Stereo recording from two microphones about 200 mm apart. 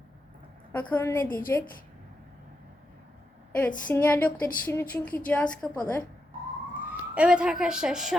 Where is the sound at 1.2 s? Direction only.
45° left (ahead or behind).